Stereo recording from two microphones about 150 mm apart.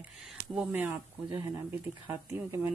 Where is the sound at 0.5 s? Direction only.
10° right (ahead or behind).